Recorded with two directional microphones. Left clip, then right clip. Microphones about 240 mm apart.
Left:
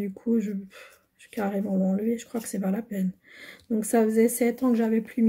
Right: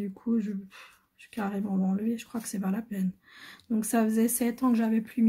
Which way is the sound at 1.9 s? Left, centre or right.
Centre.